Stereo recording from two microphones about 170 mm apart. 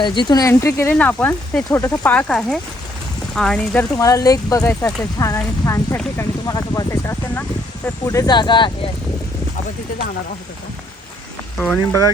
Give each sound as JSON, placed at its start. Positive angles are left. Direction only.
{"t": 0.0, "sound": "speech", "side_deg": 25}
{"t": 3.8, "sound": "speech", "side_deg": 20}
{"t": 11.6, "sound": "speech", "side_deg": 10}